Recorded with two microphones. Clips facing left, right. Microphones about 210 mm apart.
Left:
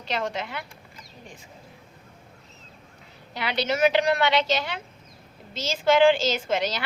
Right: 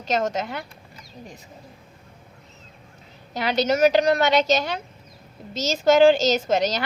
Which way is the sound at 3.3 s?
45° right (ahead or behind).